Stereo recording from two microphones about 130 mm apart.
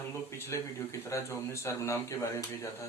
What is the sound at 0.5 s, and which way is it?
Speech, 20° left (ahead or behind).